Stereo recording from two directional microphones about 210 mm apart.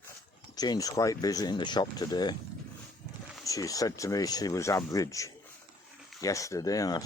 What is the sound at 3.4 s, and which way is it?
Speech, 15° left (ahead or behind).